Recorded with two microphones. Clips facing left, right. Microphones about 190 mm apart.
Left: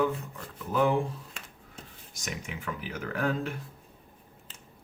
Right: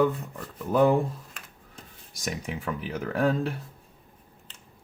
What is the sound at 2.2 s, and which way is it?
Speech, 35° right (ahead or behind).